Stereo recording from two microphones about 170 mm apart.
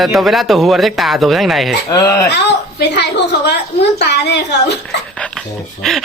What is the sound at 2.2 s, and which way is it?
A woman's voice, 85° left.